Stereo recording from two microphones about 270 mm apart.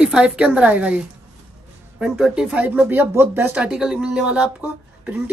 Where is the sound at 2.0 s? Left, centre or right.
Centre.